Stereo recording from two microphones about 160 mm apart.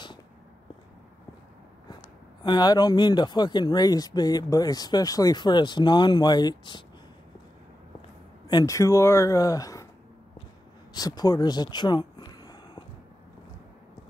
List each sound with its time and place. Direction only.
2.4 s speech: 25° left (ahead or behind)
8.5 s speech: 20° left (ahead or behind)
10.9 s a sound: 25° left (ahead or behind)